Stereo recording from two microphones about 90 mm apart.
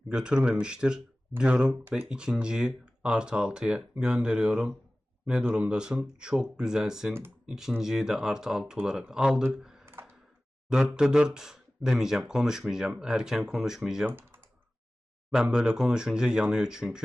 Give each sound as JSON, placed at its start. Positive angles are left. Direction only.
{"t": 0.1, "sound": "speech", "side_deg": -10}
{"t": 9.8, "sound": "a sound", "side_deg": -25}
{"t": 10.7, "sound": "speech", "side_deg": -10}
{"t": 14.1, "sound": "typing", "side_deg": -25}
{"t": 15.3, "sound": "speech", "side_deg": -10}